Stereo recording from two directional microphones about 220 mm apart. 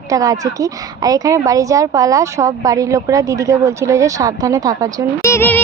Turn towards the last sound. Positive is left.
turn(degrees=10)  # may be behind; listen again after turning